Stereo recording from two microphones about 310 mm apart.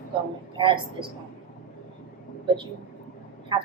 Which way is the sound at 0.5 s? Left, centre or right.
Centre.